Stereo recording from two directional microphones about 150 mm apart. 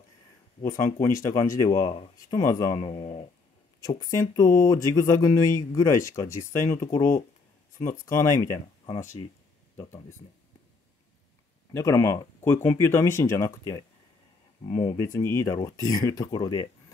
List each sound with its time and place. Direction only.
0.6 s speech: 20° left (ahead or behind)
2.7 s speech: 40° left (ahead or behind)
4.0 s speech: 20° left (ahead or behind)
9.2 s speech: 35° left (ahead or behind)
11.7 s speech: 20° left (ahead or behind)
14.7 s speech: 45° left (ahead or behind)
15.0 s speech: 20° left (ahead or behind)